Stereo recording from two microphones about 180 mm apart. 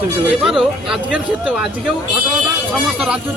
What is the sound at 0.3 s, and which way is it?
Speech, centre (ahead or behind).